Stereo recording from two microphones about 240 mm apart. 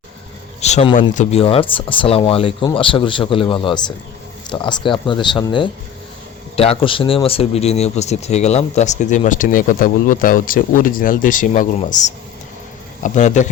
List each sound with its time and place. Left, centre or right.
0.6 s speech: left